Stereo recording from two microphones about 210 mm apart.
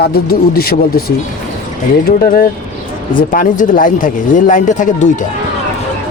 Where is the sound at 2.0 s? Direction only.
45° left (ahead or behind).